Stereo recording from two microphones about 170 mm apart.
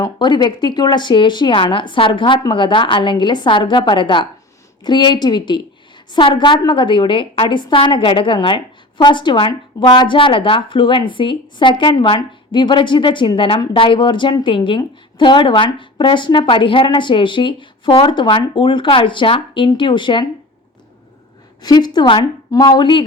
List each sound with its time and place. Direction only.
0.0 s a woman's voice: 25° left (ahead or behind)
21.6 s a woman's voice: 25° left (ahead or behind)